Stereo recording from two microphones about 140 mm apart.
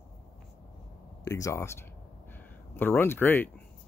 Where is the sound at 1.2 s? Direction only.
25° left (ahead or behind).